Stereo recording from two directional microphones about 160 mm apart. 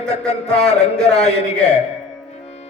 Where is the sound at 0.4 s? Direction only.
5° left (ahead or behind).